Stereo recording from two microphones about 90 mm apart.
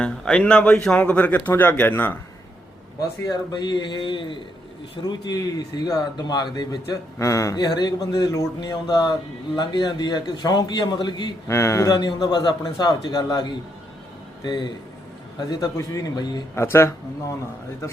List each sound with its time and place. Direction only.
0.0 s speech: 10° left (ahead or behind)
3.2 s a man's voice: 50° left (ahead or behind)
5.0 s speech: 50° left (ahead or behind); by 7.5 s 35° left (ahead or behind)
7.5 s speech: 50° left (ahead or behind)
11.4 s a man's voice: 30° left (ahead or behind)
11.9 s speech: 50° left (ahead or behind)
16.6 s a man's voice: 30° left (ahead or behind)